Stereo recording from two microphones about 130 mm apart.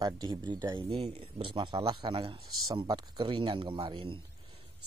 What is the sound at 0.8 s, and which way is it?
Speech, 45° right (ahead or behind).